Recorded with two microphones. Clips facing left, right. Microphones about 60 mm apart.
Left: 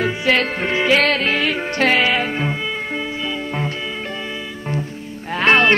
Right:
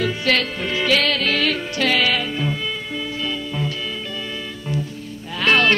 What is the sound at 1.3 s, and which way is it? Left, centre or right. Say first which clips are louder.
Music: left 1 dB; centre.